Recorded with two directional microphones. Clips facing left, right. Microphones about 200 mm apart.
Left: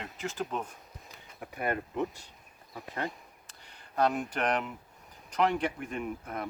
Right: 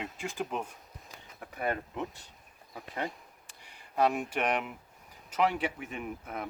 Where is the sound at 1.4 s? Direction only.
5° left (ahead or behind).